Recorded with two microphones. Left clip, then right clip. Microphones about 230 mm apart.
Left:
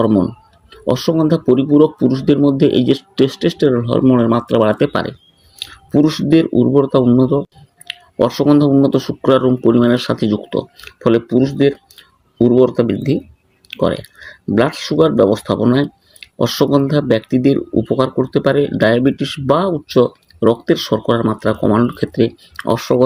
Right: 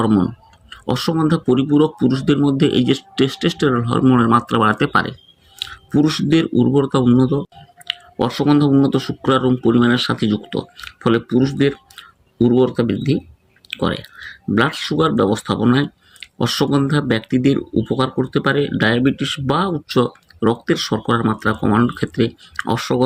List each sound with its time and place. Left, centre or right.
0.0 s speech: centre